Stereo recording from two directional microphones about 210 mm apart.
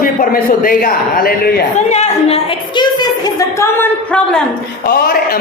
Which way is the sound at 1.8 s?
30° left (ahead or behind).